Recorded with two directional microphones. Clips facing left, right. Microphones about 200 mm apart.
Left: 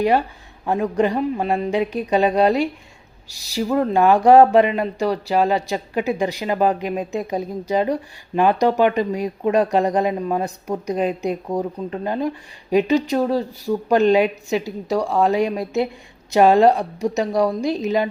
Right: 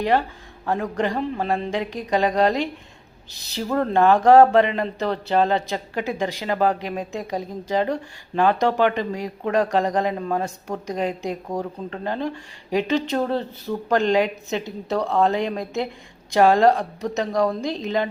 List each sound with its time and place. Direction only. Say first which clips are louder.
0.0 s speech: left 3 dB; 15° left (ahead or behind)